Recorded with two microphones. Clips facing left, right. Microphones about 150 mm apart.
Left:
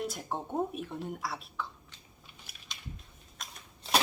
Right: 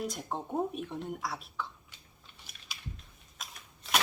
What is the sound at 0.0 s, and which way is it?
Speech, centre (ahead or behind).